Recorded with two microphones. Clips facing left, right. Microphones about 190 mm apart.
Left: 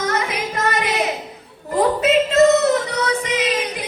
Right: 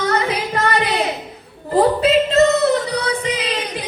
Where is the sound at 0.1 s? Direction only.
35° right (ahead or behind).